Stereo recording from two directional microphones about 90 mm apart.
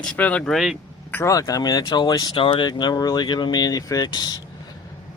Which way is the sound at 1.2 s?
40° left (ahead or behind).